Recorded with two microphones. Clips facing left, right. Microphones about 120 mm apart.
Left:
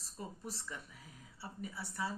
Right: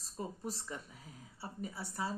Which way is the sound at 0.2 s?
35° right (ahead or behind).